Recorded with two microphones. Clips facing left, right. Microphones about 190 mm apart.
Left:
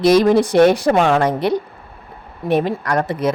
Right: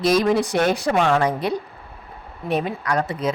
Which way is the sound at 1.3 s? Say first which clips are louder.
Left 5 dB; 75° left (ahead or behind).